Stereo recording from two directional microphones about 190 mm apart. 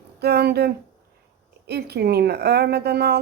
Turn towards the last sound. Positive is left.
turn(degrees=-60)  # may be behind; listen again after turning